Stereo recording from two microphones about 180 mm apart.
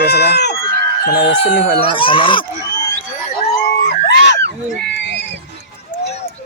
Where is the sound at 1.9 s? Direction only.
30° left (ahead or behind).